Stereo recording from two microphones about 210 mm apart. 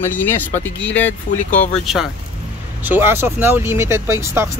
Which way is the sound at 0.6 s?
60° left (ahead or behind).